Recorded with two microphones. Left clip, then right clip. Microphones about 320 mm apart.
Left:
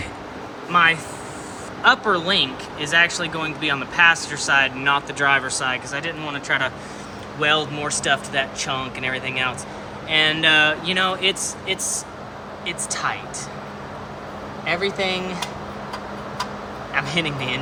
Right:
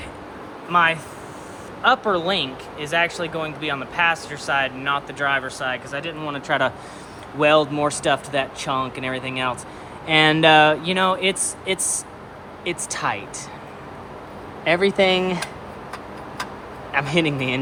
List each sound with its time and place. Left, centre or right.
0.7 s speech: centre
14.6 s speech: centre
16.9 s speech: centre